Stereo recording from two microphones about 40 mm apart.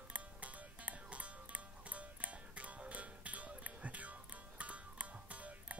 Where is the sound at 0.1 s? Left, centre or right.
Right.